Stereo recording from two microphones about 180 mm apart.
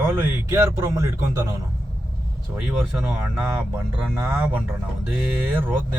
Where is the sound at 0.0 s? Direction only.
15° right (ahead or behind).